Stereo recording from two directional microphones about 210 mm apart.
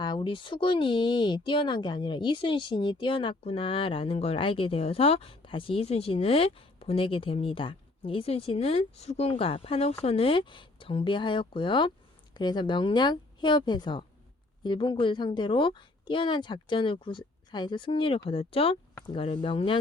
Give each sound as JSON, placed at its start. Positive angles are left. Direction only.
{"t": 0.0, "sound": "speech", "side_deg": 20}